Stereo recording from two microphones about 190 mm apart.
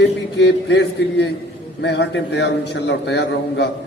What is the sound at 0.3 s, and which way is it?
A man's voice, 65° left (ahead or behind).